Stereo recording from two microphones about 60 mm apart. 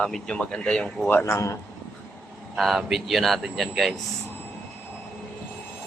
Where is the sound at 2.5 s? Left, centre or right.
Centre.